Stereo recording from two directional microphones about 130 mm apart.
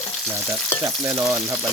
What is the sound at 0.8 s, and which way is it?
Frying, 20° right (ahead or behind).